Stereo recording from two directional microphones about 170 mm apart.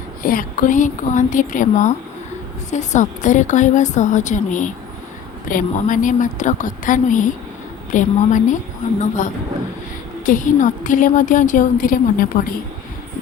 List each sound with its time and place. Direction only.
0.2 s a woman's voice: 55° left (ahead or behind)